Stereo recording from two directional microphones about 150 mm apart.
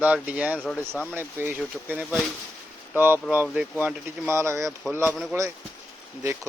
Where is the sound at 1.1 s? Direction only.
10° right (ahead or behind).